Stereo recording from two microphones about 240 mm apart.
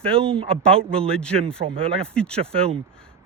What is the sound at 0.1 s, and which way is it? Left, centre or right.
Speech, right.